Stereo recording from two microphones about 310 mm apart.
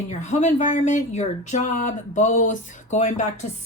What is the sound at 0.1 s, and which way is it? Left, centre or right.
A woman's voice, left.